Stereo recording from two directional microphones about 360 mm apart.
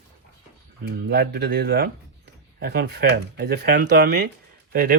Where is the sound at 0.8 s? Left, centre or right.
Right.